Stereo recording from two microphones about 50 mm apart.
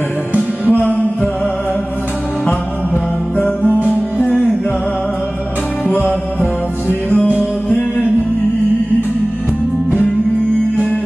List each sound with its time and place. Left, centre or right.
0.7 s music: left
3.3 s music: left
5.9 s music: left